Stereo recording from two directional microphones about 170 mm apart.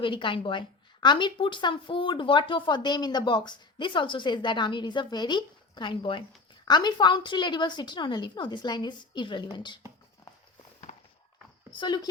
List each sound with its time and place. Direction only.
0.0 s speech: 30° left (ahead or behind)
10.9 s walk: 45° left (ahead or behind)
11.7 s speech: 25° left (ahead or behind)